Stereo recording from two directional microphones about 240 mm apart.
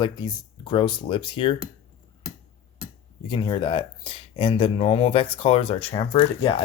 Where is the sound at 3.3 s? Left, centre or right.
Centre.